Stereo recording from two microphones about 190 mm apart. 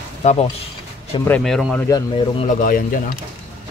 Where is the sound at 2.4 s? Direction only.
45° left (ahead or behind).